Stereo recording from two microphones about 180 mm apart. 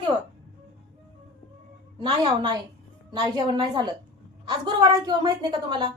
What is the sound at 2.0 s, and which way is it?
A woman's voice, 25° right (ahead or behind).